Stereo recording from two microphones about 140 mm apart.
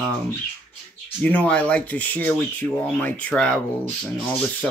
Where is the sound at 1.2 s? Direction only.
10° left (ahead or behind).